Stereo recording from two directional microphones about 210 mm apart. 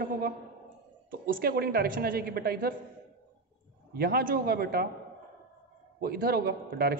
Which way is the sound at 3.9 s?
45° right (ahead or behind).